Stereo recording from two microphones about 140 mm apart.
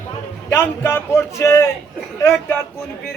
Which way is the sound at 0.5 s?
20° left (ahead or behind).